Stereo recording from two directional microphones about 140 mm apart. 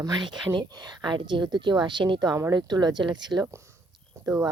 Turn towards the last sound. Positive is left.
turn(degrees=-25)  # may be behind; listen again after turning